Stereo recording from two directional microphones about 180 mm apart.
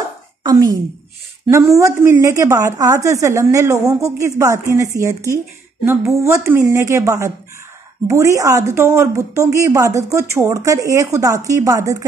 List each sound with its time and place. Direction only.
0.4 s a woman's voice: 20° right (ahead or behind)